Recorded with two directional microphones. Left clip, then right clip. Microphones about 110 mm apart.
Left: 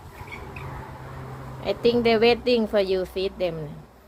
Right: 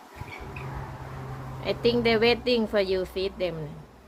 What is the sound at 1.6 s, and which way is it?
Speech, 15° left (ahead or behind).